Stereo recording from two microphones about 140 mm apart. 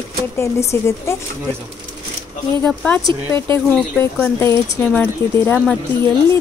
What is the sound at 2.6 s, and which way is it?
A woman's voice, 10° left (ahead or behind).